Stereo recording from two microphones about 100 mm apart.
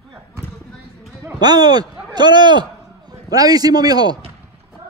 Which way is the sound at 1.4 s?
45° right (ahead or behind).